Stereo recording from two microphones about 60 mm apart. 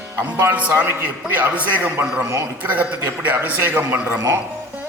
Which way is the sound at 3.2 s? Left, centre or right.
Right.